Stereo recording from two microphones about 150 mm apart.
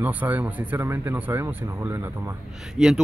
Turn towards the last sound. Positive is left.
turn(degrees=-5)  # may be behind; listen again after turning